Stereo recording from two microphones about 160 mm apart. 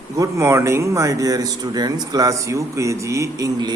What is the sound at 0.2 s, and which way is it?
A man's voice, 20° right (ahead or behind).